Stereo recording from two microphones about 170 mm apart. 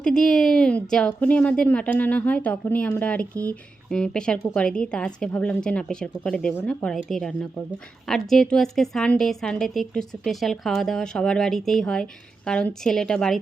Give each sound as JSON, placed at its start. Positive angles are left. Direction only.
{"t": 0.0, "sound": "a woman's voice", "side_deg": 5}